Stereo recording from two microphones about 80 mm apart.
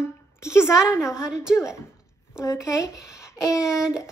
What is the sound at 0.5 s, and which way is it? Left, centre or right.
Speech, left.